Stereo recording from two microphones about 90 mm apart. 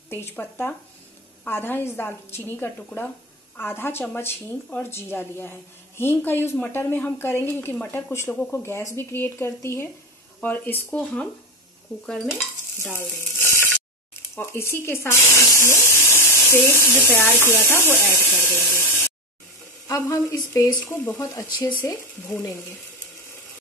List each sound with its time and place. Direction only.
0.1 s a woman's voice: 25° left (ahead or behind)
12.9 s speech: 25° left (ahead or behind)
14.3 s water tap: 25° left (ahead or behind)
17.2 s speech: 25° left (ahead or behind)
19.9 s speech: 35° left (ahead or behind)
20.8 s a woman's voice: 25° left (ahead or behind)